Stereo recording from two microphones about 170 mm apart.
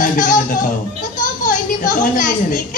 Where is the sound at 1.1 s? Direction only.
50° left (ahead or behind).